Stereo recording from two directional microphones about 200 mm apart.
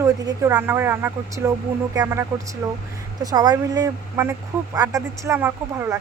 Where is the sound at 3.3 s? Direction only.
20° right (ahead or behind).